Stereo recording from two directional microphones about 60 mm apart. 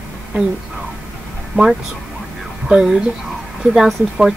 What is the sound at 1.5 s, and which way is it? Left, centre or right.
Speech, right.